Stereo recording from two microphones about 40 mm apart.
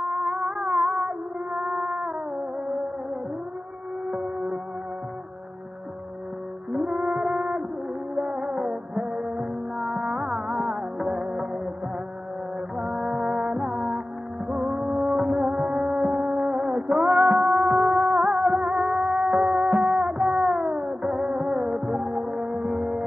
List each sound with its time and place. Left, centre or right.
0.0 s music: centre
4.1 s music: right
6.7 s music: centre
12.7 s music: centre
16.8 s music: centre